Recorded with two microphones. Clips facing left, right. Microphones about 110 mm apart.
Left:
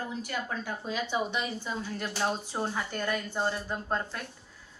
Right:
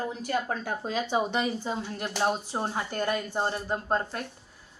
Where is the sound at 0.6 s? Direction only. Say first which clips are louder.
Right 3 dB; 45° right (ahead or behind); by 3.4 s 25° right (ahead or behind).